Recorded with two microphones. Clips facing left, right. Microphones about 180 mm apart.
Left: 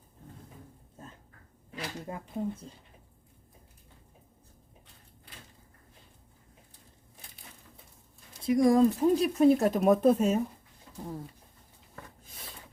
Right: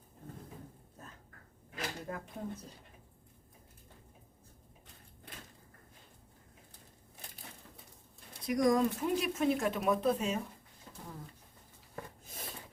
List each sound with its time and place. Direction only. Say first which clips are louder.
2.0 s speech: left 6 dB; 25° left (ahead or behind)
8.4 s speech: left 6 dB; 25° left (ahead or behind); by 10.4 s 45° left (ahead or behind)